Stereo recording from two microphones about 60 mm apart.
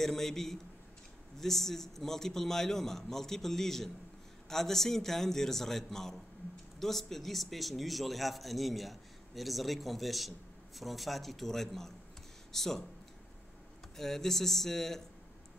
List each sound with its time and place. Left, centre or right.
0.0 s speech: centre
13.9 s speech: centre